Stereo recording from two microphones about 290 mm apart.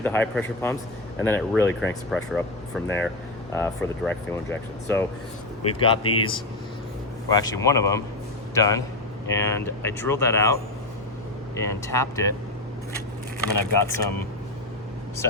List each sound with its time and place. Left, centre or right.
0.0 s speech: centre
5.8 s speech: centre
11.6 s speech: centre
13.4 s speech: centre